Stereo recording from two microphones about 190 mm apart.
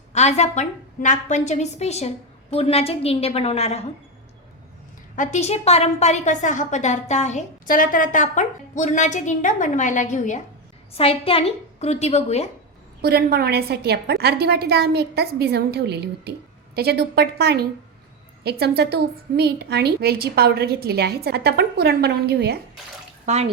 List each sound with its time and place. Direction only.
0.1 s a woman's voice: 35° left (ahead or behind)
5.1 s a woman's voice: 40° left (ahead or behind)
10.9 s a woman's voice: 30° left (ahead or behind)
13.0 s a woman's voice: 55° right (ahead or behind)
23.2 s speech: 35° right (ahead or behind)